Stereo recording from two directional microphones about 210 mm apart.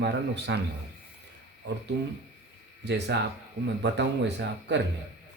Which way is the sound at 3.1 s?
55° right (ahead or behind).